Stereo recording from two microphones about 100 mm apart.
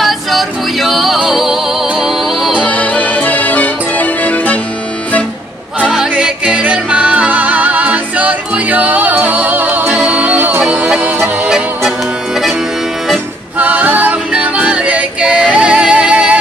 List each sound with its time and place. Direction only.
0.0 s music: centre (ahead or behind)
2.6 s music: 15° left (ahead or behind)
5.8 s music: 10° right (ahead or behind)
13.6 s music: 15° right (ahead or behind)